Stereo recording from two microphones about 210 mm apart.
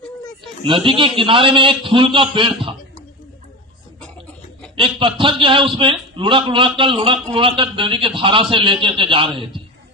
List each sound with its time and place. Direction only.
0.6 s a man's voice: 25° right (ahead or behind)
4.8 s a man's voice: 25° right (ahead or behind)